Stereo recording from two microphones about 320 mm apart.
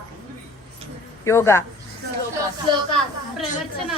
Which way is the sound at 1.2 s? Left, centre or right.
Centre.